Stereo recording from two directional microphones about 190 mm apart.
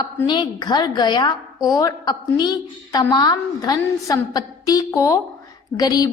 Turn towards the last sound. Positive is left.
turn(degrees=20)  # may be behind; listen again after turning